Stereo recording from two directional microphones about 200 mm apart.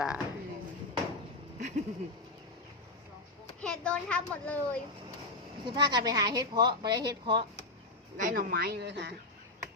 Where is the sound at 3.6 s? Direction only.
5° left (ahead or behind).